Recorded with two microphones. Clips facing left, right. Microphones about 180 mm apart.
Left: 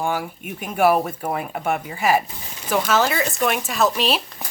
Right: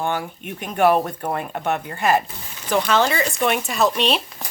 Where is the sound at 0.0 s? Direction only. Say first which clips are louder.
Even; 5° left (ahead or behind).